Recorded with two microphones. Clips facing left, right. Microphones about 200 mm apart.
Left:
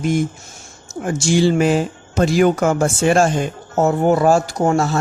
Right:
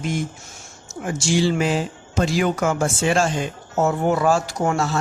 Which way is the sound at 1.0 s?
50° left (ahead or behind).